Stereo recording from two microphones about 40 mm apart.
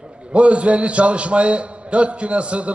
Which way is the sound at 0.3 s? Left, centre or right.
Right.